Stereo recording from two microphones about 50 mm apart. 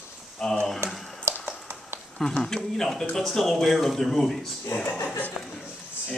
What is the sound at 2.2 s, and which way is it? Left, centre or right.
Speech, centre.